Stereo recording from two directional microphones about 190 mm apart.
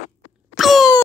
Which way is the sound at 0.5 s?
Centre (ahead or behind).